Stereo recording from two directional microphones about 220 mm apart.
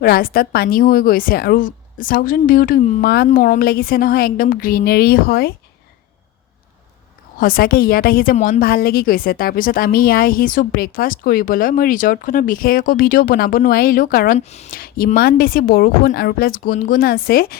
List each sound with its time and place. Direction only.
0.0 s a woman's voice: 40° left (ahead or behind)
7.3 s a woman's voice: 40° left (ahead or behind)
14.3 s a woman's voice: 30° left (ahead or behind)